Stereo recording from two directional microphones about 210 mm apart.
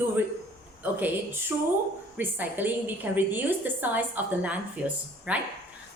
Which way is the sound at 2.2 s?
10° right (ahead or behind).